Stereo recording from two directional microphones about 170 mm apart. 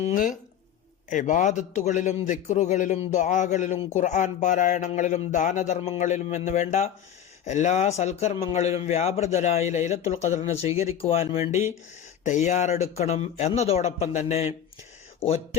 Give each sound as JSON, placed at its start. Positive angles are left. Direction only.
{"t": 0.1, "sound": "a man's voice", "side_deg": 50}